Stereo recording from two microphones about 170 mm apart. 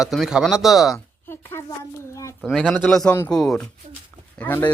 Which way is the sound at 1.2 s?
15° left (ahead or behind).